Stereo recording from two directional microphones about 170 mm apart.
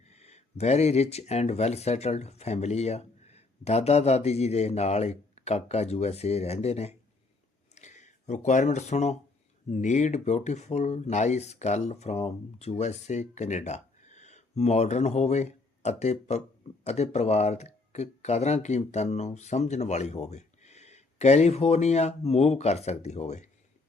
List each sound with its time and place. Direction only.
0.0 s speech: 40° left (ahead or behind)